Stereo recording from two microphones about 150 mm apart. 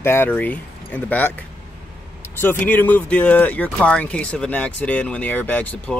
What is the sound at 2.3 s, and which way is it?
Speech, 15° left (ahead or behind).